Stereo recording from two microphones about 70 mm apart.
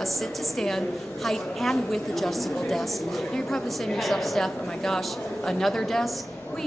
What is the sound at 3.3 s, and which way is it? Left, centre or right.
A woman's voice, centre.